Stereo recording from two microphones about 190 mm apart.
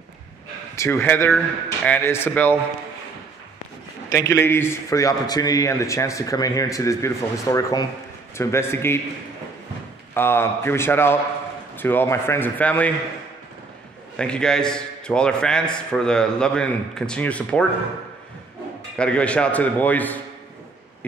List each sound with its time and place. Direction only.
0.7 s a man's voice: 15° left (ahead or behind)
4.1 s a man's voice: 15° left (ahead or behind)
10.1 s a man's voice: 10° left (ahead or behind)
14.1 s a man's voice: 5° left (ahead or behind)
18.9 s a man's voice: 5° left (ahead or behind)